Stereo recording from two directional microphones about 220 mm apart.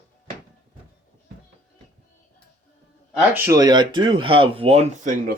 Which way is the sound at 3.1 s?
15° right (ahead or behind).